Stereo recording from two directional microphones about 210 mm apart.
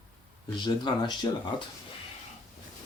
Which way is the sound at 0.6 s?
20° left (ahead or behind).